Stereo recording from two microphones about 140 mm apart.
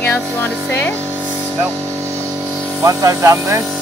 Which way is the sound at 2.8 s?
25° right (ahead or behind).